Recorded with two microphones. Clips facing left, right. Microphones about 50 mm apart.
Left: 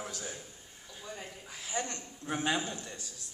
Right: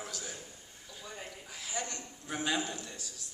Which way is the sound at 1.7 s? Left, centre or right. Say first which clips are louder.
Left 3 dB; left.